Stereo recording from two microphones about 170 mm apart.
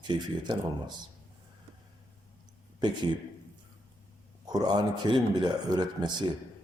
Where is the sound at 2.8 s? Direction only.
25° right (ahead or behind).